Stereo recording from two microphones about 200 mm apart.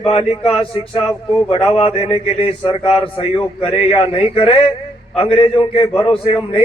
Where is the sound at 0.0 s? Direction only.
30° left (ahead or behind).